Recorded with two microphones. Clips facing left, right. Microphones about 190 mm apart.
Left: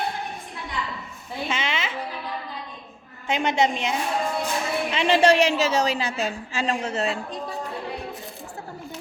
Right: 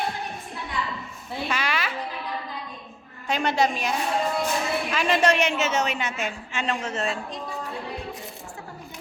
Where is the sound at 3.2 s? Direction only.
20° left (ahead or behind).